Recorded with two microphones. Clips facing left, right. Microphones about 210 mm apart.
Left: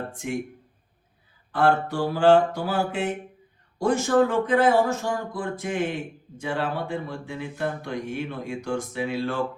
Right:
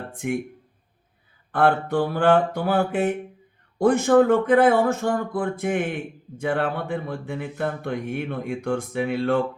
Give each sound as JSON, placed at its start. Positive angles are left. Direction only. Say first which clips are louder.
{"t": 0.1, "sound": "speech", "louder": "right 4 dB", "side_deg": -55}
{"t": 1.5, "sound": "speech", "louder": "right 2 dB", "side_deg": -55}